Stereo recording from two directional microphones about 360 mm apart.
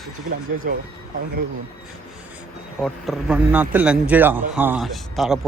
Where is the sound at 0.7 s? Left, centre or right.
Right.